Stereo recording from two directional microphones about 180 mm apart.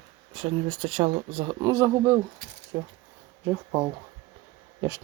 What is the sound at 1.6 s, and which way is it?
Speech, 20° right (ahead or behind).